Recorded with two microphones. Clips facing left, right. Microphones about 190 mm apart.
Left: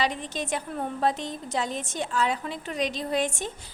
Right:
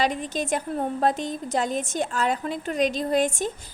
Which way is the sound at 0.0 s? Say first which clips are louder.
Right 3 dB; 45° right (ahead or behind).